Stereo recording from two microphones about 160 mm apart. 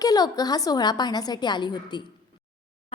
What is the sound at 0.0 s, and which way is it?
A woman's voice, 25° left (ahead or behind).